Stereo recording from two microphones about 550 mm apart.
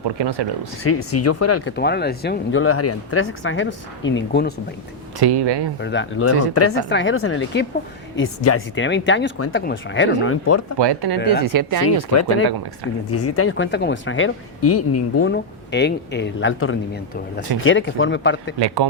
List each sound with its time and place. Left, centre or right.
0.2 s speech: right
0.9 s speech: left
5.2 s speech: right
5.8 s speech: centre
10.8 s speech: right
13.1 s speech: left
18.6 s speech: right